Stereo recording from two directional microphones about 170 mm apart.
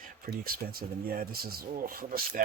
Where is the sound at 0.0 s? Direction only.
60° right (ahead or behind).